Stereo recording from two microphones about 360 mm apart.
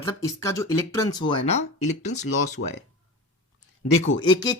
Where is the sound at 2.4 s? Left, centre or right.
Left.